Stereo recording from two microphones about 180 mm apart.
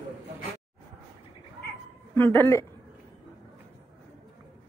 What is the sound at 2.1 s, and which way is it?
Speech, 10° left (ahead or behind).